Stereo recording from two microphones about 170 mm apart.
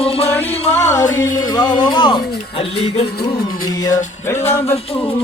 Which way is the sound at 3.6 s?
20° left (ahead or behind).